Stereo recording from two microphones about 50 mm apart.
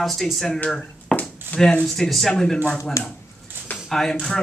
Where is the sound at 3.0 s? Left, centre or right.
Left.